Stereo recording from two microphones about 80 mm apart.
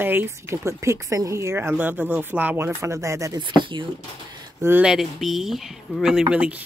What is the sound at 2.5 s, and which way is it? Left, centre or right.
Speech, right.